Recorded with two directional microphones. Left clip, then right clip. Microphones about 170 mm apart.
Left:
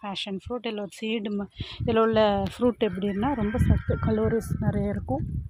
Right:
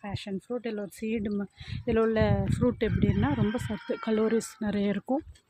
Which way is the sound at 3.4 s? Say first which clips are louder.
Left 3 dB; 10° right (ahead or behind).